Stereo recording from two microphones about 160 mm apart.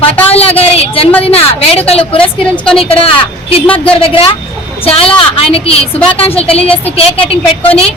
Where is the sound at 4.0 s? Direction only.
35° left (ahead or behind).